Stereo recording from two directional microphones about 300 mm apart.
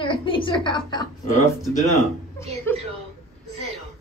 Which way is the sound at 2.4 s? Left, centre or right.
Centre.